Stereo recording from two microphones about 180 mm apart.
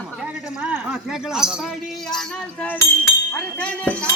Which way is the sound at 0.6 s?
5° right (ahead or behind).